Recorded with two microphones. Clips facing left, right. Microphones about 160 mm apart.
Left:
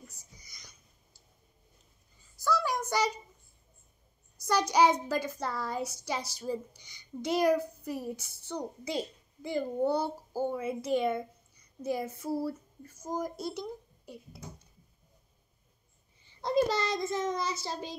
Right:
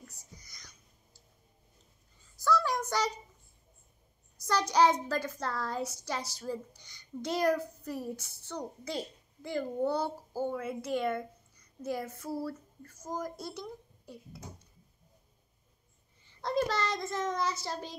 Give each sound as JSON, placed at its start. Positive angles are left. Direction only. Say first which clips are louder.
{"t": 0.0, "sound": "whispering", "louder": "right 1 dB", "side_deg": 10}
{"t": 2.4, "sound": "child singing", "louder": "right 1 dB", "side_deg": 10}
{"t": 4.5, "sound": "a child's voice", "louder": "left 1 dB", "side_deg": 10}
{"t": 16.3, "sound": "a child's voice", "louder": "left 3 dB", "side_deg": 15}